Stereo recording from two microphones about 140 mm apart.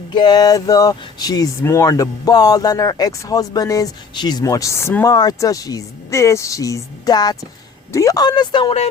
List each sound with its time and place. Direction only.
0.1 s speech: 30° left (ahead or behind)